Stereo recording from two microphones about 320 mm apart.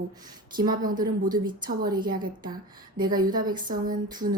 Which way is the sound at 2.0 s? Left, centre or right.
Right.